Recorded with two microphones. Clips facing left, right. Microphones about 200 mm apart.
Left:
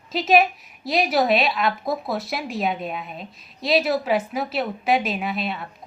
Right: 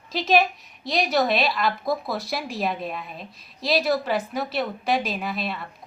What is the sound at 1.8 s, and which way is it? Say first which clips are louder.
Speech: even; 25° left (ahead or behind).